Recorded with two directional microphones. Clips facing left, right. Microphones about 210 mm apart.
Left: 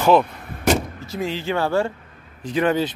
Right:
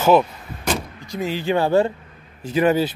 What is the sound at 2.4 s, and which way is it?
Speech, 5° right (ahead or behind).